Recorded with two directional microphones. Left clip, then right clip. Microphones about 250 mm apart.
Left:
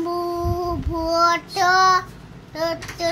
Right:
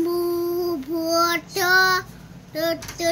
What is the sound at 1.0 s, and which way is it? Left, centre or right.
Child singing, centre.